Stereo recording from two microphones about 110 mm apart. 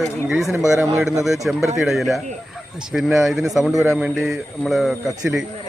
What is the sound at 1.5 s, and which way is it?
Speech, 10° right (ahead or behind).